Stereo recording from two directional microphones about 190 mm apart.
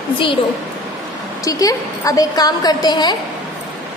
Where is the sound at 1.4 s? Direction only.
15° left (ahead or behind).